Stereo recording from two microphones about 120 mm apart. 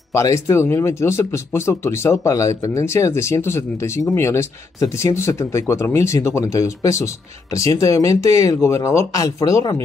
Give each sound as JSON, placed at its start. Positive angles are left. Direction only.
{"t": 0.1, "sound": "speech", "side_deg": 25}